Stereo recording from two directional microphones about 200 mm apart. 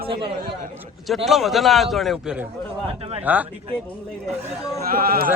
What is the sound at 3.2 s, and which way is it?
Speech, 10° right (ahead or behind).